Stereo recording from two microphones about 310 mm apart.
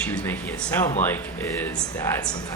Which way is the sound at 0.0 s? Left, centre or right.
Centre.